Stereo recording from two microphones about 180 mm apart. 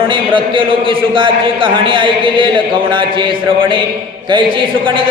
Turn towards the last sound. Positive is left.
turn(degrees=-30)  # may be behind; listen again after turning